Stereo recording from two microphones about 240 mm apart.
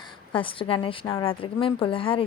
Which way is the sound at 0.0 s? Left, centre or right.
Left.